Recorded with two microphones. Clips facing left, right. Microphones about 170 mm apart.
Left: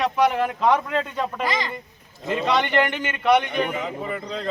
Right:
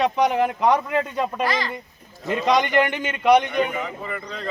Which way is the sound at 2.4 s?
15° right (ahead or behind).